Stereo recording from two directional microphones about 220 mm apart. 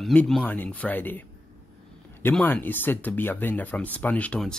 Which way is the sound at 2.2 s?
10° left (ahead or behind).